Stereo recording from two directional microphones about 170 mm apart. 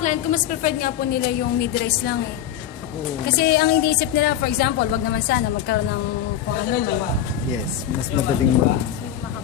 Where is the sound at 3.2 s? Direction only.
70° left (ahead or behind).